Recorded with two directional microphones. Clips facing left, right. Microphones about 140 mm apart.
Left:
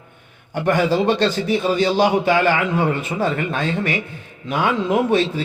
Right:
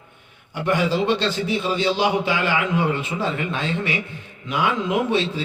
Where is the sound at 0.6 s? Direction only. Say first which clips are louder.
Left 3 dB; 45° left (ahead or behind).